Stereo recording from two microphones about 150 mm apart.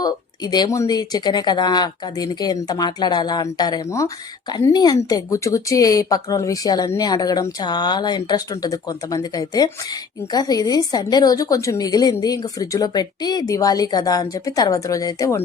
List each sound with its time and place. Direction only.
0.0 s speech: 25° left (ahead or behind)